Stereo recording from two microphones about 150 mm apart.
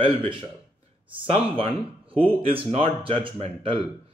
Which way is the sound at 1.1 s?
40° right (ahead or behind).